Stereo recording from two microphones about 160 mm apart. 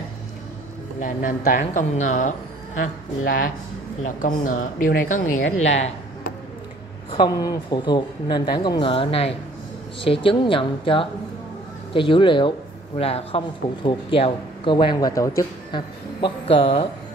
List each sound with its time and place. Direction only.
0.9 s speech: 50° left (ahead or behind)
4.0 s speech: 50° left (ahead or behind)
5.6 s speech: 45° left (ahead or behind)
7.1 s speech: 25° left (ahead or behind)
16.2 s speech: 35° left (ahead or behind)